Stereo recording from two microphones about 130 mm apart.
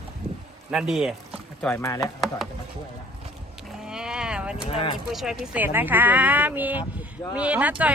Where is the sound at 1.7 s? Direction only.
25° left (ahead or behind).